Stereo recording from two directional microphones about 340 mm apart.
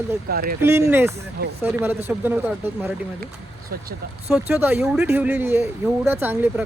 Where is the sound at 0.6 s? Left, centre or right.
Centre.